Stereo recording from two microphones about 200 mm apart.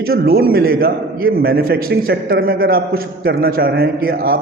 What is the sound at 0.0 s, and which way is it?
A man's voice, 50° right (ahead or behind).